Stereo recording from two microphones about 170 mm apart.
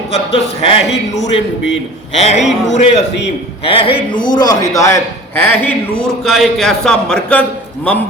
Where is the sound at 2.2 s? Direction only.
40° left (ahead or behind); by 5.4 s 15° left (ahead or behind).